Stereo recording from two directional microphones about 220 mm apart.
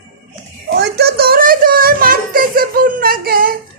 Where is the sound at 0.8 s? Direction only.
45° right (ahead or behind).